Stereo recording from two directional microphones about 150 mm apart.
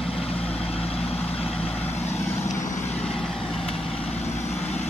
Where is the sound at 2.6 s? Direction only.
55° left (ahead or behind).